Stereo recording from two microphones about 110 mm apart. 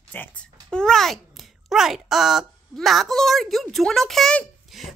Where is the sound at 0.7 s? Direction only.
5° left (ahead or behind).